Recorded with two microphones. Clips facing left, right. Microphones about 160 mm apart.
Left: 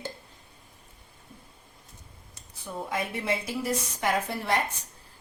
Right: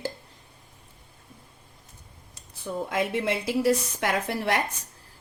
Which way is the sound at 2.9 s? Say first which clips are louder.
Right 3 dB; 90° right.